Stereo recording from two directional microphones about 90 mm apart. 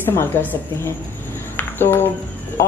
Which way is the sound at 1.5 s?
20° left (ahead or behind).